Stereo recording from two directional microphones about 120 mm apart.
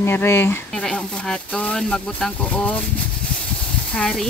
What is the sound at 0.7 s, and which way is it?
Speech, 5° left (ahead or behind).